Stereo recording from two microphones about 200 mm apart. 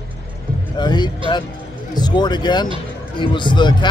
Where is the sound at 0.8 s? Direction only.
20° left (ahead or behind).